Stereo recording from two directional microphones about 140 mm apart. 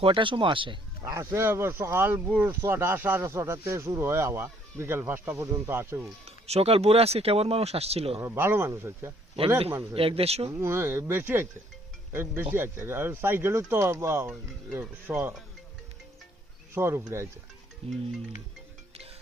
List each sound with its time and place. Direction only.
0.0 s speech: 40° right (ahead or behind)
1.1 s speech: 20° right (ahead or behind)
6.2 s speech: 45° right (ahead or behind)
8.2 s speech: 15° right (ahead or behind)
9.9 s speech: 40° right (ahead or behind)
10.5 s speech: 20° right (ahead or behind)
16.7 s speech: 20° right (ahead or behind)
17.8 s speech: 45° right (ahead or behind)